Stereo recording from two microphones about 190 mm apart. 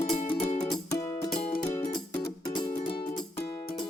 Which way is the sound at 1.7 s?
15° left (ahead or behind).